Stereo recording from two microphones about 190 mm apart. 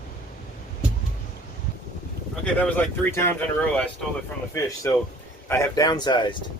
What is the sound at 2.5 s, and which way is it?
Speech, 5° left (ahead or behind).